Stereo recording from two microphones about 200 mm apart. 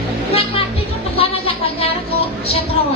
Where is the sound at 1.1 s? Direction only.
30° left (ahead or behind).